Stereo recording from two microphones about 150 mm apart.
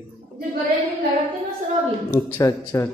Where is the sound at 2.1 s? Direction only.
20° left (ahead or behind).